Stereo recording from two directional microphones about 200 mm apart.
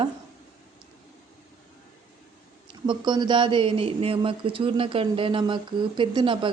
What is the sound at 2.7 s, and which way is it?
Speech, 25° right (ahead or behind).